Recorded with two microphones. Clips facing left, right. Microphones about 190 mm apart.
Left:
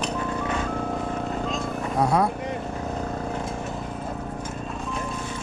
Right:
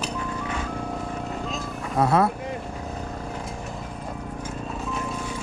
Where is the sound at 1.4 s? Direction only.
Centre (ahead or behind).